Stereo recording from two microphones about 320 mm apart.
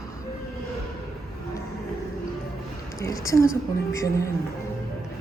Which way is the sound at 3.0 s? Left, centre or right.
Centre.